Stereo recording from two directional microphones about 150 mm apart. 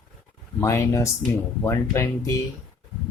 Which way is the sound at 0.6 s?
20° left (ahead or behind).